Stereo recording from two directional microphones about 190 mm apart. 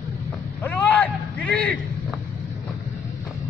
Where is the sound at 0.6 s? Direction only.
10° left (ahead or behind).